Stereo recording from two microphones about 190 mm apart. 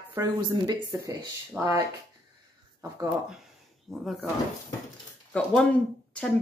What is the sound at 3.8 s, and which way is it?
Speech, centre (ahead or behind).